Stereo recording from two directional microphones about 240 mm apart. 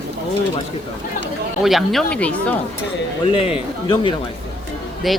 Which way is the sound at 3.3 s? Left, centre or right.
Left.